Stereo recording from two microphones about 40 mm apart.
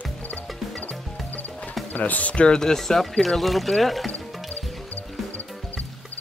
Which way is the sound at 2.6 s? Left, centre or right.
Centre.